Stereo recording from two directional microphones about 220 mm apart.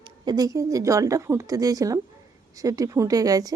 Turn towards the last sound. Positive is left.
turn(degrees=-15)  # may be behind; listen again after turning